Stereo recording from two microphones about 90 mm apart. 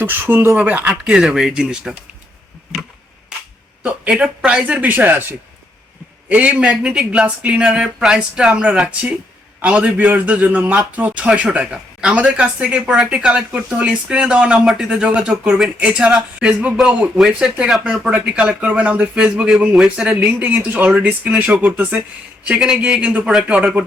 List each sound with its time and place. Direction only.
0.0 s a man's voice: 25° right (ahead or behind); by 2.0 s 10° right (ahead or behind)
3.8 s a man's voice: 15° right (ahead or behind)
20.1 s a man's voice: 15° right (ahead or behind)